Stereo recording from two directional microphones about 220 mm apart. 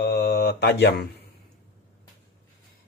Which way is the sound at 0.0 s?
45° left (ahead or behind).